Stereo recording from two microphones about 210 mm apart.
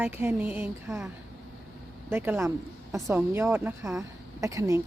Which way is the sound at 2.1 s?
10° right (ahead or behind).